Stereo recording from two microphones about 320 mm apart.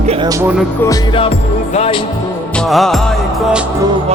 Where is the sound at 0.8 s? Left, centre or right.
Centre.